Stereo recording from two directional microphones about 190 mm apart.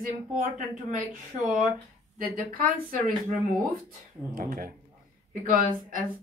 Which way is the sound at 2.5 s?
45° right (ahead or behind).